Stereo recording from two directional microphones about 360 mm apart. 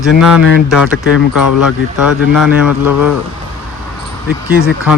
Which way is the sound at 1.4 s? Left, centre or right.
Left.